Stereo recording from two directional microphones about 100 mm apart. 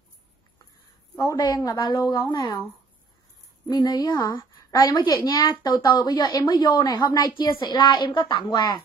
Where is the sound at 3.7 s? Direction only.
40° left (ahead or behind).